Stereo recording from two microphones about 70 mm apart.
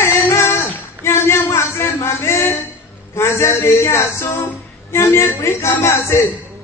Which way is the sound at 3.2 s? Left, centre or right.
Left.